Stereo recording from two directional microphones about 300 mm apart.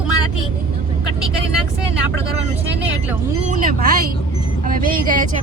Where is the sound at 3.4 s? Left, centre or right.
Right.